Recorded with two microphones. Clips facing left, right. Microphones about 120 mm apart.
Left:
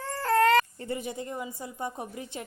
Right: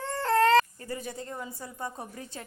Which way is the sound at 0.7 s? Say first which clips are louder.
Left 3 dB; 25° left (ahead or behind).